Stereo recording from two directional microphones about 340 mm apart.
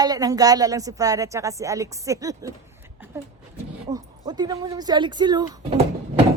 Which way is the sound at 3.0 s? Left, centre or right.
Centre.